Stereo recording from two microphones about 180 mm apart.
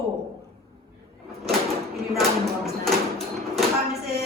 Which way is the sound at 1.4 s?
Centre (ahead or behind).